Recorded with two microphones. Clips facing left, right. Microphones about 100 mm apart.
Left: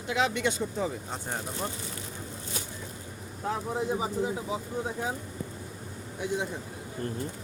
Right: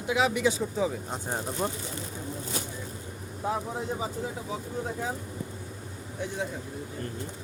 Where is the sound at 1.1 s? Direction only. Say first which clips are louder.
Right 2 dB; 15° right (ahead or behind).